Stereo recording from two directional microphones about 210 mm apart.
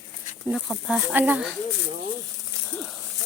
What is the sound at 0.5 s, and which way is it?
Speech, centre (ahead or behind).